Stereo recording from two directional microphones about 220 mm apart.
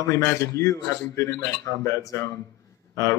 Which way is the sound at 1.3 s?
50° right (ahead or behind).